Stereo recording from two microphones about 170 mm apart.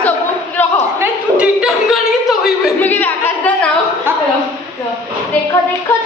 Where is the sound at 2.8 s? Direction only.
10° left (ahead or behind).